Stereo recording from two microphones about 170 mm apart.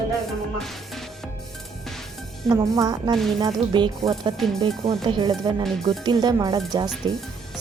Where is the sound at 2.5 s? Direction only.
20° right (ahead or behind).